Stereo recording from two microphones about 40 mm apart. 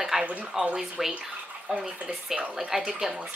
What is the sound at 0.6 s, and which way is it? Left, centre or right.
Speech, right.